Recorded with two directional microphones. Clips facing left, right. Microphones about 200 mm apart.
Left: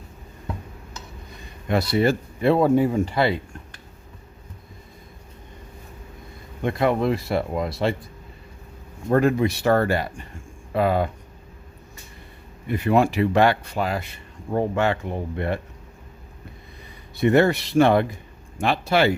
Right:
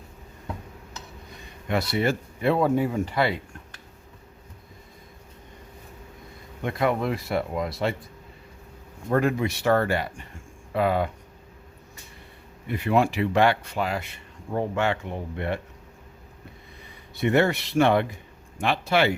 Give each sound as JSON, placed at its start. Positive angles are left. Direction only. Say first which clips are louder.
{"t": 1.6, "sound": "speech", "louder": "left 4 dB", "side_deg": 35}
{"t": 6.6, "sound": "speech", "louder": "left 3 dB", "side_deg": 30}
{"t": 9.0, "sound": "speech", "louder": "left 4 dB", "side_deg": 35}
{"t": 12.6, "sound": "speech", "louder": "left 3 dB", "side_deg": 45}
{"t": 17.2, "sound": "speech", "louder": "left 4 dB", "side_deg": 40}